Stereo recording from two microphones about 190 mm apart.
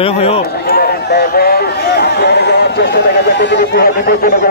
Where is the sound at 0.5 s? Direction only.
55° left (ahead or behind).